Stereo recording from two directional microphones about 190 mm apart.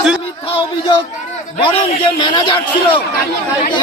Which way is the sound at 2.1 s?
25° left (ahead or behind).